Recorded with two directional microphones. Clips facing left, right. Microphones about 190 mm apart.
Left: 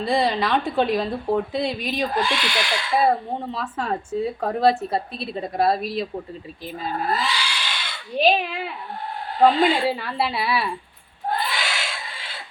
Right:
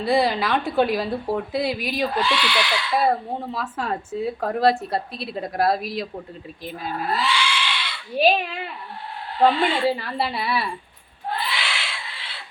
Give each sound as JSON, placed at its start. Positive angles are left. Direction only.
{"t": 0.0, "sound": "speech", "side_deg": 0}
{"t": 2.1, "sound": "speech", "side_deg": 45}
{"t": 3.1, "sound": "speech", "side_deg": 0}
{"t": 7.1, "sound": "goat", "side_deg": 40}
{"t": 8.1, "sound": "speech", "side_deg": 0}
{"t": 9.5, "sound": "speech", "side_deg": 40}
{"t": 9.8, "sound": "speech", "side_deg": 0}
{"t": 11.3, "sound": "goat", "side_deg": 45}